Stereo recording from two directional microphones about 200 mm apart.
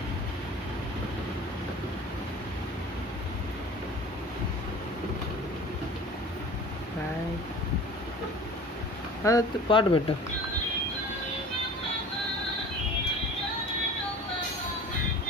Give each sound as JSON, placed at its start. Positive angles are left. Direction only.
{"t": 9.2, "sound": "speech", "side_deg": 20}